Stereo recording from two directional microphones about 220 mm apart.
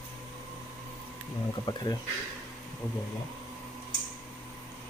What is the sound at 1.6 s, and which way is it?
Speech, 20° left (ahead or behind).